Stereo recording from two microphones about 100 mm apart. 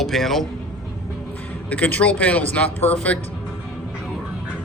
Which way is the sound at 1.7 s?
15° left (ahead or behind).